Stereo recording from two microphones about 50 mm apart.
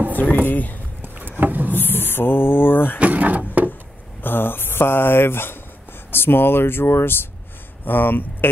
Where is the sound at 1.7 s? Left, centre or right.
Left.